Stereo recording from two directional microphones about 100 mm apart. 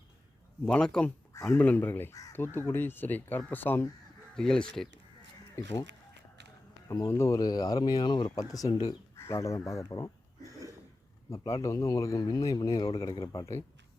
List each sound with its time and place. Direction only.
0.7 s speech: 10° left (ahead or behind)
1.3 s speech: 30° left (ahead or behind)
4.4 s speech: 5° left (ahead or behind)
5.6 s speech: 30° left (ahead or behind)
6.8 s speech: 35° left (ahead or behind)
10.4 s throat clearing: 35° right (ahead or behind)
11.3 s speech: 35° left (ahead or behind)